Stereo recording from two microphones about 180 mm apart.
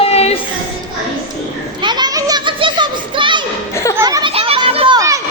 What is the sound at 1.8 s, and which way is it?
Children playing, 25° right (ahead or behind).